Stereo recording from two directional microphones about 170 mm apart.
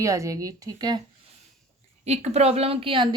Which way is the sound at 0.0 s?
20° right (ahead or behind).